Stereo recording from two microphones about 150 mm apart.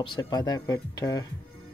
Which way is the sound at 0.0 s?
30° left (ahead or behind).